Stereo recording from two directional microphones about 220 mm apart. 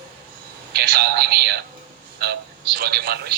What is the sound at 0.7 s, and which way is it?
Speech, 45° right (ahead or behind).